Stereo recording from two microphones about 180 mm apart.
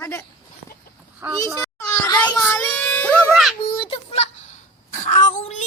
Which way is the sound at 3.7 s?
30° left (ahead or behind).